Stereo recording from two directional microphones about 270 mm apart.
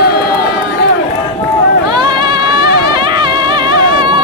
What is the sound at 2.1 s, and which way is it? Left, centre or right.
Music, centre.